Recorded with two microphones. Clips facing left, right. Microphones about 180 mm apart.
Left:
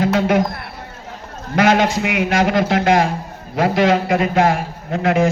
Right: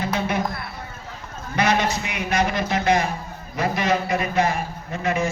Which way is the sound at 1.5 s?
90° left.